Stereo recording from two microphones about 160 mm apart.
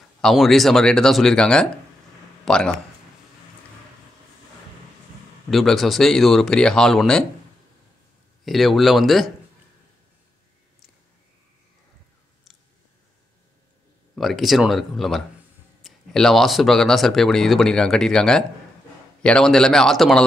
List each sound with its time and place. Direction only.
0.2 s speech: centre (ahead or behind)
5.5 s speech: centre (ahead or behind)
8.5 s speech: centre (ahead or behind)
14.1 s speech: centre (ahead or behind)